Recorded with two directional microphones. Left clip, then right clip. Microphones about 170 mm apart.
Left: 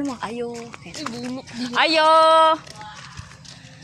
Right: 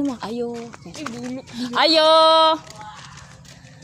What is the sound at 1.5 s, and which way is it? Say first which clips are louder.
Speech: right 2 dB; 70° right (ahead or behind).